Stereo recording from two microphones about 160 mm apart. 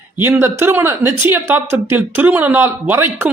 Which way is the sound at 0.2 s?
15° right (ahead or behind).